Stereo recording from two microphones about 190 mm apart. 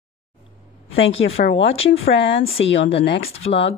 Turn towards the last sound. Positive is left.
turn(degrees=30)  # may be behind; listen again after turning